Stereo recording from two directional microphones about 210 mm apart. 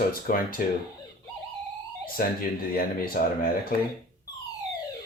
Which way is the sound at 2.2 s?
45° left (ahead or behind).